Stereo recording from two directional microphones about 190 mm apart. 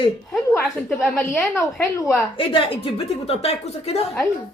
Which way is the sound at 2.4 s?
30° left (ahead or behind).